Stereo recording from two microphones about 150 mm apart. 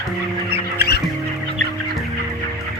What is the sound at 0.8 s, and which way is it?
Music, 90° left.